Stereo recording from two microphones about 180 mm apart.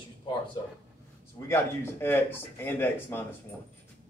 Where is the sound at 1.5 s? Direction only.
10° left (ahead or behind).